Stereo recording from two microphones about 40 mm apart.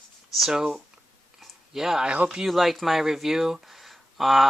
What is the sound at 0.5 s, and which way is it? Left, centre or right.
Speech, centre.